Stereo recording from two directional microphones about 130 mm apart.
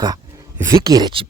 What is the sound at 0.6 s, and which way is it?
Speech, 30° right (ahead or behind).